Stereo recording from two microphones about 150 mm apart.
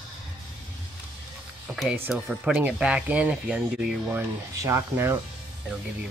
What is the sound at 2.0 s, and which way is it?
Speech, 10° right (ahead or behind).